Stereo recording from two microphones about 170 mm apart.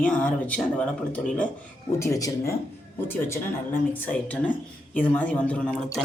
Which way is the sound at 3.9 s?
10° left (ahead or behind).